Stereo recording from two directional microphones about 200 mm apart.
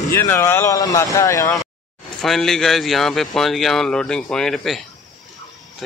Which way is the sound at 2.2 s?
Centre (ahead or behind).